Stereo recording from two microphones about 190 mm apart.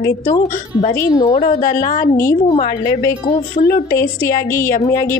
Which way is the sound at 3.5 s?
45° left (ahead or behind).